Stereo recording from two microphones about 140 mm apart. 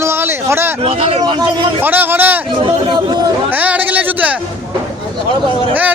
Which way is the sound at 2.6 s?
30° right (ahead or behind).